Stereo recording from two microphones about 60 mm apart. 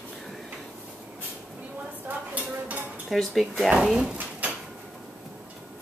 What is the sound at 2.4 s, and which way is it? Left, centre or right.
Dishes, right.